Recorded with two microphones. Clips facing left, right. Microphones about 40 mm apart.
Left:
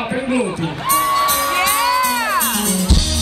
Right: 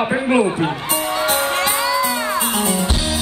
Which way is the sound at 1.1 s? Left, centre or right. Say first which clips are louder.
Left 2 dB; right.